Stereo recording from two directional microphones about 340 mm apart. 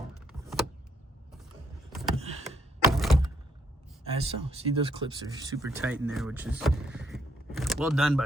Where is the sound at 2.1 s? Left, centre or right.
Centre.